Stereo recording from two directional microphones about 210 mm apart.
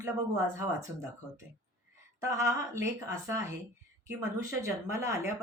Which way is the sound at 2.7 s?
15° right (ahead or behind).